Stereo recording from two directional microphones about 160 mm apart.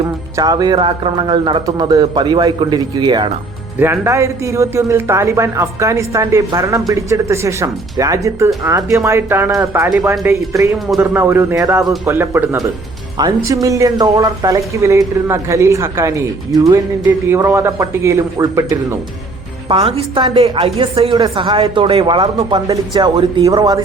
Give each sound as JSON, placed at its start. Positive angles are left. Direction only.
{"t": 0.3, "sound": "a man's voice", "side_deg": -25}
{"t": 3.8, "sound": "a man's voice", "side_deg": -15}
{"t": 19.6, "sound": "a woman's voice", "side_deg": -35}
{"t": 23.1, "sound": "a woman's voice", "side_deg": -35}
{"t": 23.5, "sound": "a man's voice", "side_deg": -25}